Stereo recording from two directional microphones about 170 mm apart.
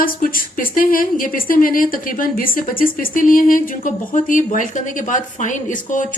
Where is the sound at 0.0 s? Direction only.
55° left (ahead or behind).